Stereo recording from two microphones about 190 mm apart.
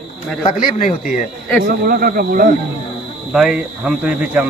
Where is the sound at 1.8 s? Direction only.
50° right (ahead or behind).